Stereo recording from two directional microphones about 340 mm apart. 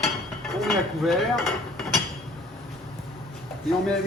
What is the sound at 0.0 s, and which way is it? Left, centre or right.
Cutlery, centre.